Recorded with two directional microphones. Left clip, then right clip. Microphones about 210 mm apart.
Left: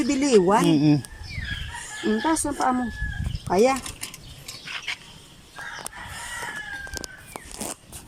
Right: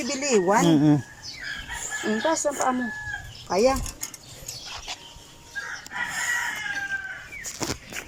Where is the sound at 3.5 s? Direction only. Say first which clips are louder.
Left 1 dB; 30° left (ahead or behind).